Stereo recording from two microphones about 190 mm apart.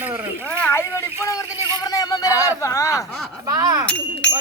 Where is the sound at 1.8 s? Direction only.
20° left (ahead or behind).